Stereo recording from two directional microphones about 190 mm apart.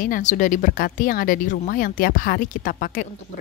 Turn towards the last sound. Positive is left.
turn(degrees=45)  # may be behind; listen again after turning